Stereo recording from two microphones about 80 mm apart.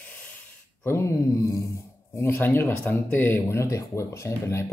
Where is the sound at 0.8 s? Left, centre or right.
Left.